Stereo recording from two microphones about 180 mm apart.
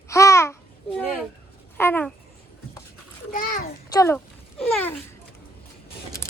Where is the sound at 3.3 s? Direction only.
45° left (ahead or behind).